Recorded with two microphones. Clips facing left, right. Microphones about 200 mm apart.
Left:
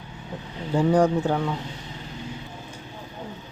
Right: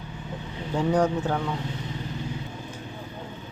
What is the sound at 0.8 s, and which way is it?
Speech, 10° left (ahead or behind).